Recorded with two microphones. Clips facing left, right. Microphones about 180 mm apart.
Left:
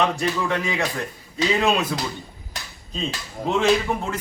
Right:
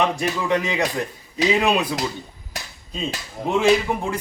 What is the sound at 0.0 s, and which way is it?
A man's voice, 15° right (ahead or behind).